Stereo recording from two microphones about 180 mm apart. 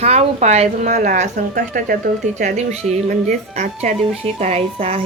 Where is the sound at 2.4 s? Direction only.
40° right (ahead or behind).